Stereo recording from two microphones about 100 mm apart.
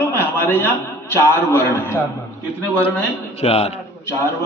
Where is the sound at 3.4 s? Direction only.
90° left.